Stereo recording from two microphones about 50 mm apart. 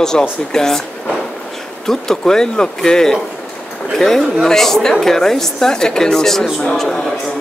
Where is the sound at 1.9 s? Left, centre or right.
Centre.